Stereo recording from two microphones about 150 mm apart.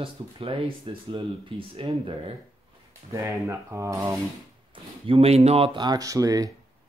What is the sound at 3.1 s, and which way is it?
Speech, 20° right (ahead or behind).